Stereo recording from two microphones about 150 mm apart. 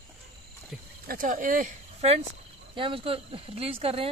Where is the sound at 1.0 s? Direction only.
70° right (ahead or behind).